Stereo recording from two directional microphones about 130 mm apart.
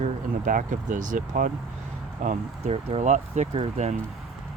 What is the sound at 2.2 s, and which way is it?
Speech, 65° right (ahead or behind).